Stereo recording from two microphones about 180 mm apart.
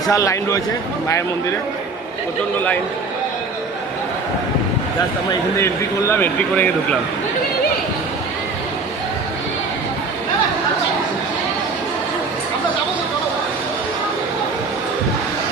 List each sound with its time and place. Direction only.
0.1 s speech: 15° left (ahead or behind)
5.3 s speech: 15° left (ahead or behind)